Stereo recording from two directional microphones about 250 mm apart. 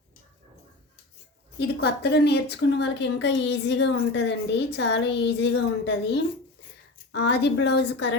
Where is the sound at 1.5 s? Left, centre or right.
Left.